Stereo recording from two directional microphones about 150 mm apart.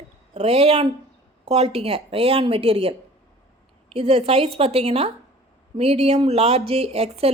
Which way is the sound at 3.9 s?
40° right (ahead or behind).